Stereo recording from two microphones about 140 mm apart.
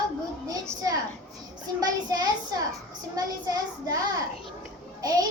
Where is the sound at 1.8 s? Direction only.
25° right (ahead or behind).